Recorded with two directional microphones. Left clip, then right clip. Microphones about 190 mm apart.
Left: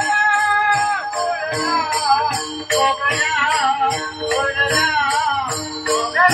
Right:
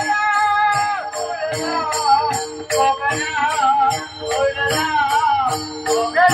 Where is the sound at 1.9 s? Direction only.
35° right (ahead or behind).